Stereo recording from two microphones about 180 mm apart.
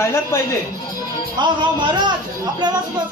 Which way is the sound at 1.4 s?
25° right (ahead or behind).